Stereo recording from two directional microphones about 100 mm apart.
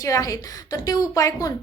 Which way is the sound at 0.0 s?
35° left (ahead or behind).